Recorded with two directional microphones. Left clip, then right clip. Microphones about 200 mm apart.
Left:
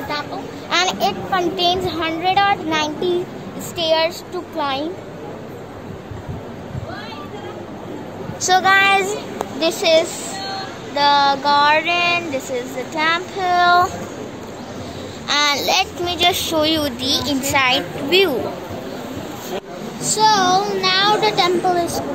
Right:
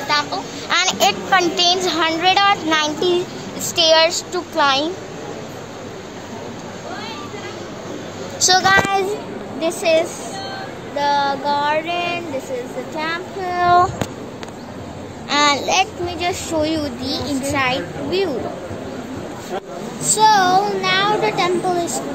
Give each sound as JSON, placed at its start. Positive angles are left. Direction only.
{"t": 0.1, "sound": "a sound", "side_deg": -20}
{"t": 0.7, "sound": "a woman's voice", "side_deg": -5}
{"t": 8.4, "sound": "speech", "side_deg": 0}
{"t": 9.6, "sound": "speech", "side_deg": 15}
{"t": 11.0, "sound": "child singing", "side_deg": 25}
{"t": 15.2, "sound": "a child's voice", "side_deg": 0}
{"t": 20.1, "sound": "a child's voice", "side_deg": -5}